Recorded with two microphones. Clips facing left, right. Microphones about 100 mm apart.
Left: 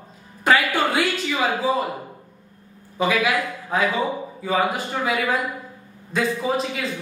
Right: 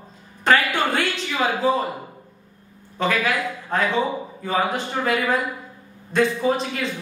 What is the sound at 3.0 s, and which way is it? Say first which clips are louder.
A man's voice: left 1 dB; 5° left (ahead or behind).